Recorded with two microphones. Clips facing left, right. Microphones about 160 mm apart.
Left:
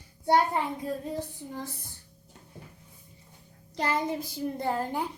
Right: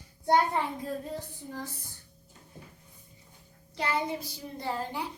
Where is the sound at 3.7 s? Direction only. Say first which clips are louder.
Left 2 dB; 45° left (ahead or behind).